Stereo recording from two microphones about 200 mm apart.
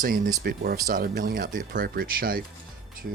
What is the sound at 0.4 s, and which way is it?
Speech, 50° right (ahead or behind).